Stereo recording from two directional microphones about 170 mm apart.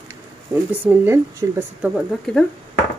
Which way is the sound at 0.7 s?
10° right (ahead or behind).